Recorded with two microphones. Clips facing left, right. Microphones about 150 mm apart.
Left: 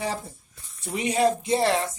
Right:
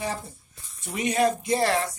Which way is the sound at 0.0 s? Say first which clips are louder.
Left 1 dB; 35° left (ahead or behind).